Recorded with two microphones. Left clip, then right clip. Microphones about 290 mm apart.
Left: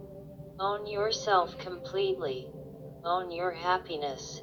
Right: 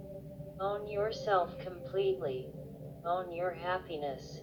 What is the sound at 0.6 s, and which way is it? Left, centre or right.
Speech, left.